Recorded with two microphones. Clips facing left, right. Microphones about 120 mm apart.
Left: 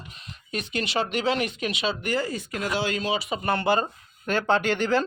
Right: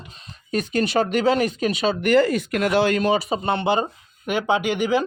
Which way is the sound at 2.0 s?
70° right (ahead or behind).